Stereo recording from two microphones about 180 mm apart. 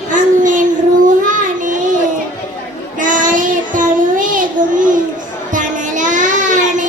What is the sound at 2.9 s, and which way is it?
Child singing, 45° right (ahead or behind).